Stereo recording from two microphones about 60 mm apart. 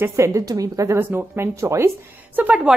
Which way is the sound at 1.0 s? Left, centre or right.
Right.